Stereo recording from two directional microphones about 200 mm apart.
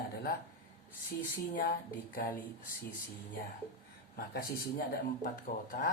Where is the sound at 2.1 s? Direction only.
45° left (ahead or behind).